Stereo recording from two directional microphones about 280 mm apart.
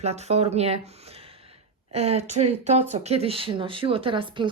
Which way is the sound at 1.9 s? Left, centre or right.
Right.